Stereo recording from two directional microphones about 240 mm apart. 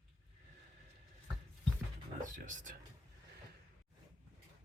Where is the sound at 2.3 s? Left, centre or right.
Right.